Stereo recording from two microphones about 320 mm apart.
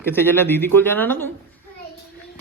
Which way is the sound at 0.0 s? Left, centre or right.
Centre.